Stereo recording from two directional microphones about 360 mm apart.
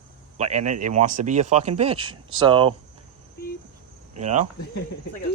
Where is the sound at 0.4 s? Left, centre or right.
Right.